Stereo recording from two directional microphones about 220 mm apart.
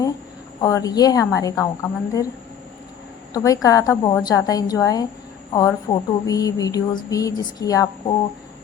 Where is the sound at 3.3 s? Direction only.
15° left (ahead or behind).